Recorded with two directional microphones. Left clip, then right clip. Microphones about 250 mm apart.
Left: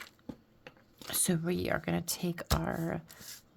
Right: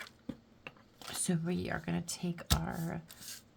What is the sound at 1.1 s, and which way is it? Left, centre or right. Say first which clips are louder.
Speech: left 4 dB; left.